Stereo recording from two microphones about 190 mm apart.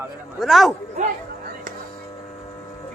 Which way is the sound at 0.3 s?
Centre (ahead or behind).